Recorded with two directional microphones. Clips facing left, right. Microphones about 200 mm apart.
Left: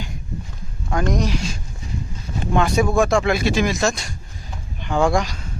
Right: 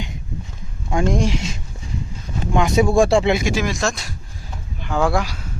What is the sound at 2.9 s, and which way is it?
Speech, 30° right (ahead or behind).